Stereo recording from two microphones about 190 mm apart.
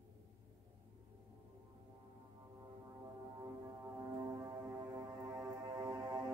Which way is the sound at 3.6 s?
15° right (ahead or behind).